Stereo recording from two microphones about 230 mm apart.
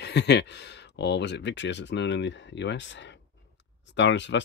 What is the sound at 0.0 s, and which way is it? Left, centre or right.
Speech, left.